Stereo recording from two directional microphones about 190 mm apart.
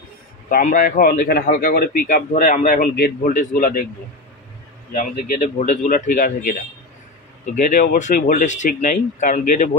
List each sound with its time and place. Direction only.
0.5 s a man's voice: 45° left (ahead or behind)
4.9 s a man's voice: 45° left (ahead or behind)
7.7 s speech: 40° left (ahead or behind)